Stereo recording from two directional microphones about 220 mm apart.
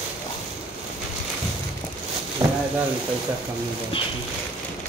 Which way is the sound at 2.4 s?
15° right (ahead or behind).